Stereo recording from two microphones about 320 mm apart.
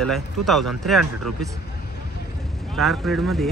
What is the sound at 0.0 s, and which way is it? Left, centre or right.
Speech, centre.